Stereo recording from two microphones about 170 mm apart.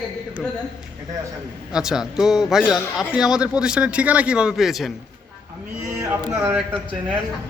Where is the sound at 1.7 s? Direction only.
5° right (ahead or behind).